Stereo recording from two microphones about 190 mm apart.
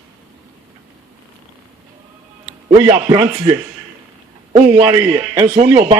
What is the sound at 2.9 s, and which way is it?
Speech, 25° right (ahead or behind).